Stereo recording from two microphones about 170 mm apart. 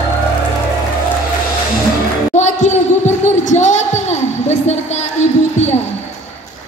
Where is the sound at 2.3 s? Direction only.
45° left (ahead or behind).